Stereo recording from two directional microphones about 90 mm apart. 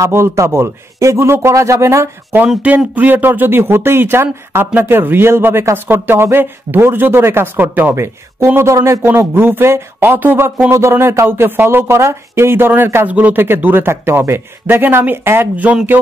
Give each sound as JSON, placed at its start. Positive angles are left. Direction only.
{"t": 0.0, "sound": "a man's voice", "side_deg": -30}
{"t": 2.8, "sound": "speech", "side_deg": -15}
{"t": 8.7, "sound": "a man's voice", "side_deg": -35}
{"t": 9.0, "sound": "speech", "side_deg": -25}